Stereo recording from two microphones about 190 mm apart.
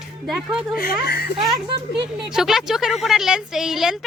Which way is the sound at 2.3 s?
Centre (ahead or behind).